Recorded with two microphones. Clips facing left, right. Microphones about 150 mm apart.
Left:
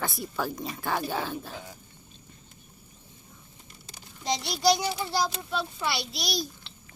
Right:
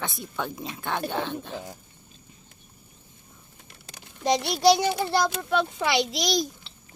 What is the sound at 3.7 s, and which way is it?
A child's voice, 65° right (ahead or behind).